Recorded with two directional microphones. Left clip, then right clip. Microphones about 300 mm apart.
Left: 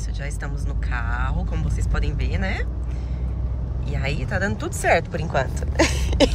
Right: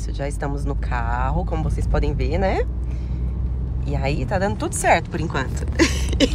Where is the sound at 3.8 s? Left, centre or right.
Centre.